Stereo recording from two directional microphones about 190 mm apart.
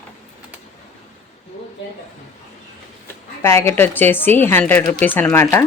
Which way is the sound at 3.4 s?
10° left (ahead or behind).